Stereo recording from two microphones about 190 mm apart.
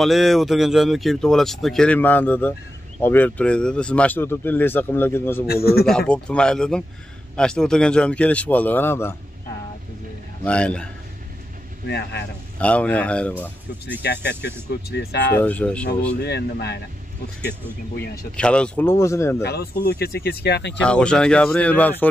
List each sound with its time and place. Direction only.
0.0 s speech: centre (ahead or behind)
5.5 s speech: 55° left (ahead or behind)
5.9 s speech: 5° left (ahead or behind)
10.4 s speech: 5° left (ahead or behind)
11.9 s speech: 60° left (ahead or behind)
12.5 s speech: 5° left (ahead or behind)
14.0 s speech: 65° left (ahead or behind)
15.3 s speech: 5° left (ahead or behind)
16.2 s speech: 60° left (ahead or behind)
18.3 s speech: 5° left (ahead or behind)
19.4 s speech: 55° left (ahead or behind)
20.8 s speech: 5° left (ahead or behind)